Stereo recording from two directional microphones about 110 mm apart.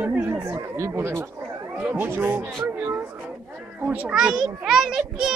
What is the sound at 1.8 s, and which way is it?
Speech, 10° right (ahead or behind).